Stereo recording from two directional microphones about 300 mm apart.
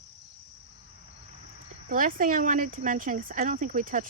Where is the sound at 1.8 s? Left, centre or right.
Right.